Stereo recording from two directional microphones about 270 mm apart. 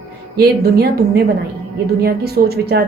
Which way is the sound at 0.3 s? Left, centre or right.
Right.